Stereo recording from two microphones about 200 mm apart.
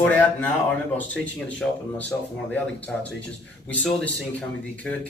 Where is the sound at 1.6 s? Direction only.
10° left (ahead or behind).